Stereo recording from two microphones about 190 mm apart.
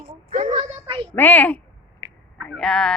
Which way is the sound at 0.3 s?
45° right (ahead or behind).